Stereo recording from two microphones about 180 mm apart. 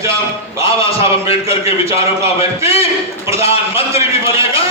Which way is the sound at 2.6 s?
15° right (ahead or behind).